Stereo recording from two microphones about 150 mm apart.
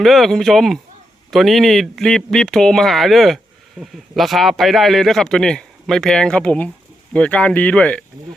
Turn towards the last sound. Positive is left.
turn(degrees=10)  # may be behind; listen again after turning